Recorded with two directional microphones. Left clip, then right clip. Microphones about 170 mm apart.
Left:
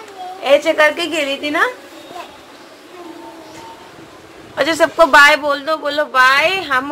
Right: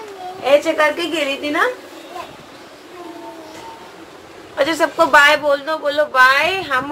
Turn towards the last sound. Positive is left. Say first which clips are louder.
# left 2 dB
turn(degrees=40)  # may be behind; listen again after turning